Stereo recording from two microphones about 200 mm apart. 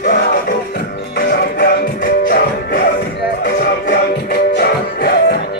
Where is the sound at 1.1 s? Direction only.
45° left (ahead or behind).